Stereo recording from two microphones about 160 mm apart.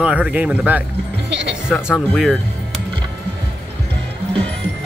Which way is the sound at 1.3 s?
90° right.